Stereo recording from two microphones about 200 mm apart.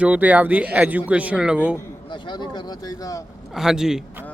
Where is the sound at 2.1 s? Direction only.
20° left (ahead or behind).